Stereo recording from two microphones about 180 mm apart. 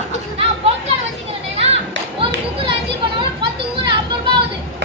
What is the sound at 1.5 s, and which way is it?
Children playing, 35° right (ahead or behind).